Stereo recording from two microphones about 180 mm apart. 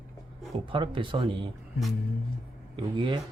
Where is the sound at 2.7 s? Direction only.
25° right (ahead or behind).